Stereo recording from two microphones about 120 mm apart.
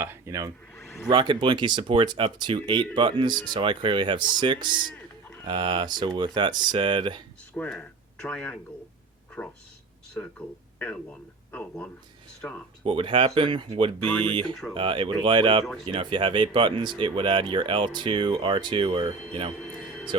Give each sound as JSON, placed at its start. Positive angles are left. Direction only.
{"t": 0.0, "sound": "speech", "side_deg": -20}
{"t": 0.8, "sound": "a sound", "side_deg": 0}
{"t": 1.1, "sound": "speech", "side_deg": -45}
{"t": 7.5, "sound": "speech", "side_deg": 10}
{"t": 12.8, "sound": "speech", "side_deg": -50}
{"t": 14.0, "sound": "speech", "side_deg": 15}
{"t": 14.8, "sound": "speech", "side_deg": -45}